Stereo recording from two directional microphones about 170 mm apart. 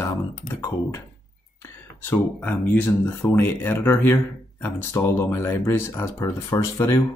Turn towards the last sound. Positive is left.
turn(degrees=20)  # may be behind; listen again after turning